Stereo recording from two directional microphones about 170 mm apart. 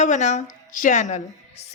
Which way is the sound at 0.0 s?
45° left (ahead or behind).